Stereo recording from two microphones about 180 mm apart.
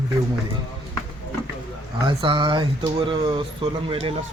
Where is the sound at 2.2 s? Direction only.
25° right (ahead or behind).